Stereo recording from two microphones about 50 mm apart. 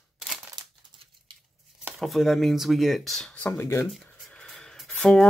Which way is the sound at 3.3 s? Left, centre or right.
Left.